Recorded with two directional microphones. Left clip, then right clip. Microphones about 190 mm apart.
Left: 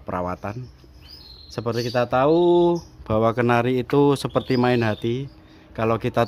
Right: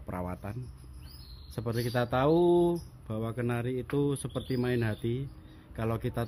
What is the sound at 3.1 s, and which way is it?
A man's voice, 35° left (ahead or behind).